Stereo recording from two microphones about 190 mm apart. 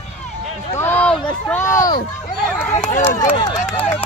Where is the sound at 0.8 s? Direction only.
10° left (ahead or behind).